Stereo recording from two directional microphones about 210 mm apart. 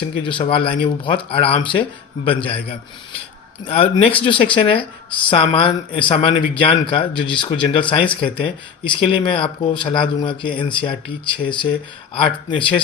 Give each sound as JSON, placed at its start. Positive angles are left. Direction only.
{"t": 0.3, "sound": "speech", "side_deg": 25}